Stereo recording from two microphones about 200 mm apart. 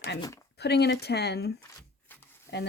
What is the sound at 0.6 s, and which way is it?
Speech, 55° left (ahead or behind).